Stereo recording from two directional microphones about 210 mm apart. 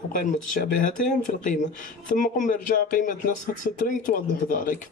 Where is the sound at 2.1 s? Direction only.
35° left (ahead or behind).